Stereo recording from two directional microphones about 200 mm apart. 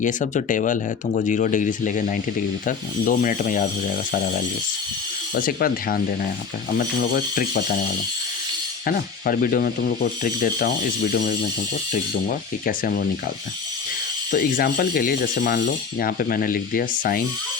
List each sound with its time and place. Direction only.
0.0 s speech: 40° left (ahead or behind)
8.9 s speech: 45° left (ahead or behind)
14.3 s speech: 45° left (ahead or behind)